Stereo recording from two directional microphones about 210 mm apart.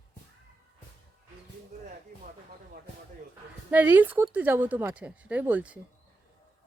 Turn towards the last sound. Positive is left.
turn(degrees=-5)  # may be behind; listen again after turning